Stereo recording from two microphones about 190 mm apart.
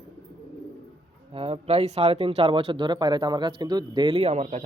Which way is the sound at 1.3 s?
30° right (ahead or behind).